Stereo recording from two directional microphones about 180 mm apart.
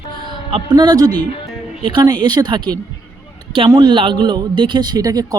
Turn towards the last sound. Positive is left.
turn(degrees=-20)  # may be behind; listen again after turning